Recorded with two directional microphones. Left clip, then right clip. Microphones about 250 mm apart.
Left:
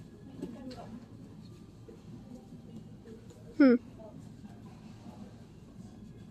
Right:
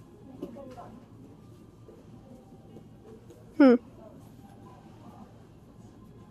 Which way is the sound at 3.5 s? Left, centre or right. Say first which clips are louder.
Right 4 dB; centre.